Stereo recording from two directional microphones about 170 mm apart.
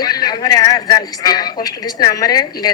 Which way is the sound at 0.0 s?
25° left (ahead or behind).